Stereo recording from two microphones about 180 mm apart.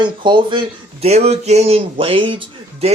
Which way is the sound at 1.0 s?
35° right (ahead or behind).